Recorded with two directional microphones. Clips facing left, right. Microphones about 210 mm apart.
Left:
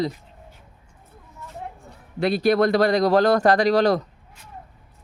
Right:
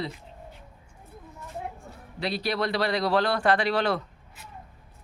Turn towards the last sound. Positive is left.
turn(degrees=40)  # may be behind; listen again after turning